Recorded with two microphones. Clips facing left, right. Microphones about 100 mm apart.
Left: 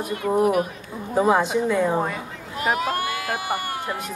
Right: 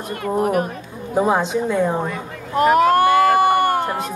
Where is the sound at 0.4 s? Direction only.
45° right (ahead or behind).